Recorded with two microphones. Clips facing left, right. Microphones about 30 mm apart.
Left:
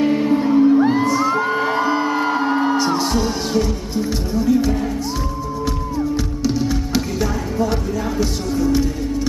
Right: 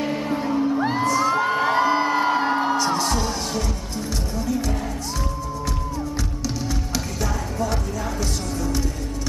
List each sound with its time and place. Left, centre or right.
0.0 s music: centre
1.0 s crowd: centre
1.3 s whoop: centre
2.8 s music: centre
6.4 s music: centre